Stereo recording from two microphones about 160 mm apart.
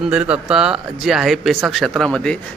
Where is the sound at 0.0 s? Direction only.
5° right (ahead or behind).